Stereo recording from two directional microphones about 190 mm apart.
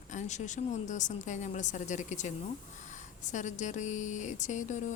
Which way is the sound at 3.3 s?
40° left (ahead or behind).